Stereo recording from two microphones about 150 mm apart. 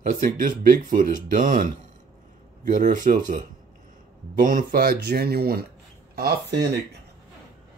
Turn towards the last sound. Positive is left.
turn(degrees=-90)